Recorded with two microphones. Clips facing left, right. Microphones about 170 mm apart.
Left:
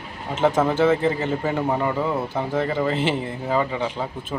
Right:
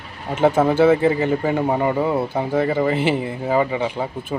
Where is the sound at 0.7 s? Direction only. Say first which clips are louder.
Right 4 dB; 10° right (ahead or behind).